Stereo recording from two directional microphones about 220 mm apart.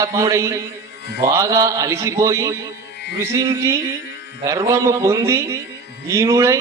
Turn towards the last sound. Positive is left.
turn(degrees=-15)  # may be behind; listen again after turning